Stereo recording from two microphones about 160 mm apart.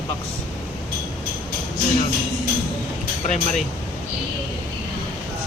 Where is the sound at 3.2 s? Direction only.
50° left (ahead or behind).